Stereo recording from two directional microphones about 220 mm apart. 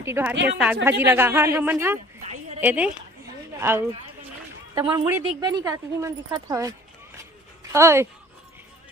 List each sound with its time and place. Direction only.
0.0 s a woman's voice: 10° right (ahead or behind)